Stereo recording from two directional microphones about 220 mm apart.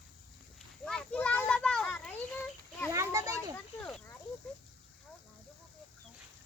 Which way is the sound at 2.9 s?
15° right (ahead or behind).